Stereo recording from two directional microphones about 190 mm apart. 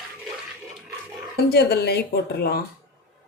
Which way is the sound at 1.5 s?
60° left (ahead or behind).